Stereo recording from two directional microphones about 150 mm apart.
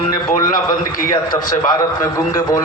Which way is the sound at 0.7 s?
20° left (ahead or behind).